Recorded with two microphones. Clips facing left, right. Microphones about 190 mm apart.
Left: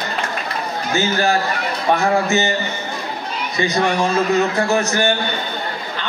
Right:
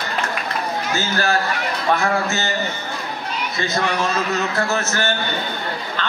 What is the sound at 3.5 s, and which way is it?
A man's voice, 15° left (ahead or behind).